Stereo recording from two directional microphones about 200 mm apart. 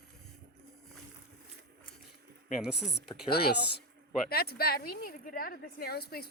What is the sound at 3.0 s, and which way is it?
A woman's voice, 55° left (ahead or behind).